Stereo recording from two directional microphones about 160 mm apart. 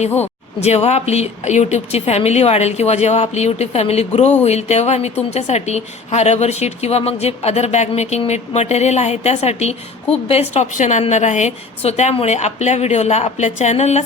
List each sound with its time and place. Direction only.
0.6 s a woman's voice: 40° left (ahead or behind)